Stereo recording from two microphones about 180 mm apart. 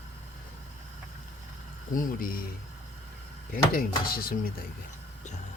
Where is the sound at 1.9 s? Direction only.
50° left (ahead or behind).